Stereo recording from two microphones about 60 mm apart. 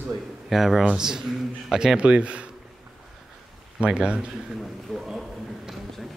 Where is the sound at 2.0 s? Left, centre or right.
Centre.